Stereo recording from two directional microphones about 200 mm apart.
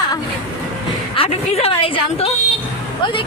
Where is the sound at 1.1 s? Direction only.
30° left (ahead or behind).